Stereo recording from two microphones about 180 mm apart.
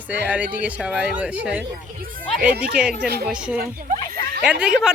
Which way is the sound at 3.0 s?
65° right (ahead or behind).